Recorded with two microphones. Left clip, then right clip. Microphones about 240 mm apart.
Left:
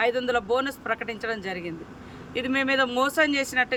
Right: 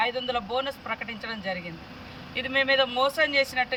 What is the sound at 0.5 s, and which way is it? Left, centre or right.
Speech, centre.